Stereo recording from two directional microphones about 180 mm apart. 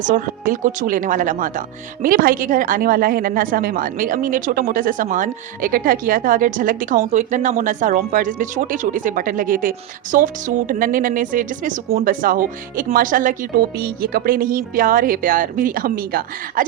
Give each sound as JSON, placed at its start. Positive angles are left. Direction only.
{"t": 0.0, "sound": "speech", "side_deg": -50}